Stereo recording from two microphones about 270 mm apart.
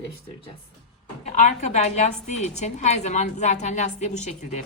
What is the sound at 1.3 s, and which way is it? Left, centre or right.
A woman's voice, left.